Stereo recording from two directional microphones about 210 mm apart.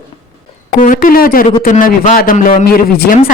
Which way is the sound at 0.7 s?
40° left (ahead or behind).